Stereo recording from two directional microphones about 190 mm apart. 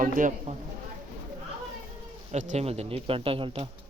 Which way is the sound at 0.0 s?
45° right (ahead or behind).